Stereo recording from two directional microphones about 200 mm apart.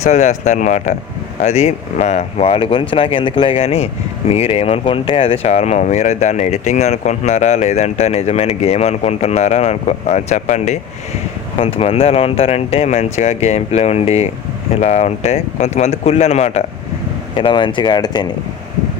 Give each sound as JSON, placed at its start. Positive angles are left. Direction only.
{"t": 0.0, "sound": "speech", "side_deg": 35}